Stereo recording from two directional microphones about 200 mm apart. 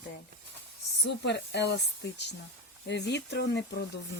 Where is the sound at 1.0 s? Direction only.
60° left (ahead or behind).